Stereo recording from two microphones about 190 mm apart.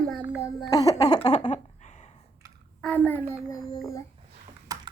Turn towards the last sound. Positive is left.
turn(degrees=-20)  # may be behind; listen again after turning